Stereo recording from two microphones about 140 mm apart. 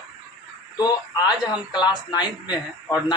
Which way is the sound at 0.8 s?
30° left (ahead or behind).